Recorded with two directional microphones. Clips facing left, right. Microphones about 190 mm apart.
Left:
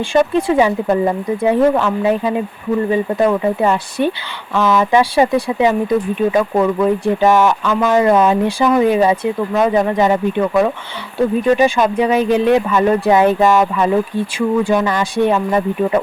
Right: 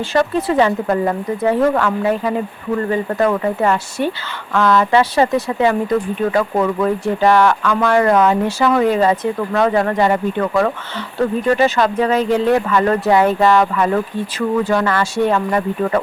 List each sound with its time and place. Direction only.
0.1 s speech: 15° left (ahead or behind)